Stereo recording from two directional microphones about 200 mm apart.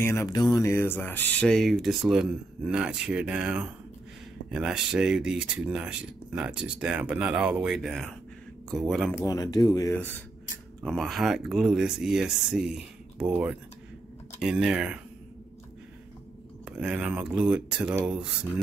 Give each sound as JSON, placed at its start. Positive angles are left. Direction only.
{"t": 0.0, "sound": "speech", "side_deg": 15}
{"t": 9.2, "sound": "speech", "side_deg": 20}
{"t": 16.6, "sound": "speech", "side_deg": -5}